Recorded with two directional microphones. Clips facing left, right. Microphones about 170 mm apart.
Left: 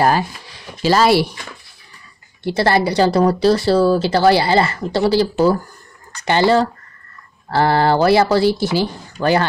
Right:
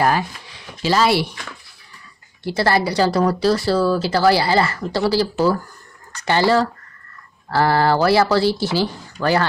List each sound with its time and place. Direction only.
0.0 s speech: 35° left (ahead or behind)
2.4 s speech: 25° left (ahead or behind)